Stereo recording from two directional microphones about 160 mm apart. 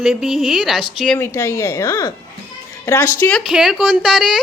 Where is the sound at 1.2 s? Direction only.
20° left (ahead or behind).